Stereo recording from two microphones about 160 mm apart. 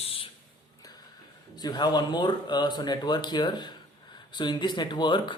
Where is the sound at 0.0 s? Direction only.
35° left (ahead or behind).